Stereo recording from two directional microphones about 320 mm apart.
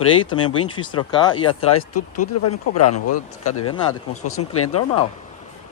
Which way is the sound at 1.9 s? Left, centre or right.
Left.